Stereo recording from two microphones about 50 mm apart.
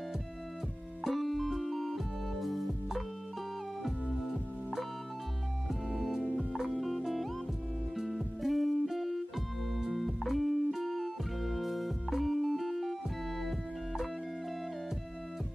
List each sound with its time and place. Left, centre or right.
1.0 s music: centre
13.4 s organ: centre